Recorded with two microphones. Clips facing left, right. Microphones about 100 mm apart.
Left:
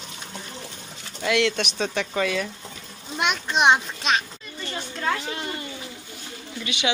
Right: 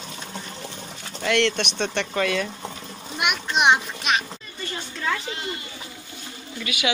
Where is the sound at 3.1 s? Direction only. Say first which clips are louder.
Left 1 dB; 15° right (ahead or behind).